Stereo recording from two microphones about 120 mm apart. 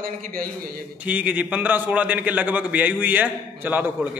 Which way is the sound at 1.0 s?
10° right (ahead or behind).